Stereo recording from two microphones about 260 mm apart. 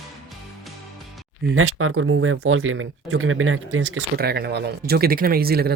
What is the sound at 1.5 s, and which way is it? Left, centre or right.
Speech, right.